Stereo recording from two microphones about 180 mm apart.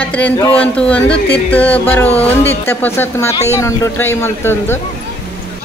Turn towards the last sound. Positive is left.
turn(degrees=15)  # may be behind; listen again after turning